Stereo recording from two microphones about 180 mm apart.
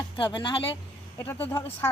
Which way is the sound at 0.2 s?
25° left (ahead or behind).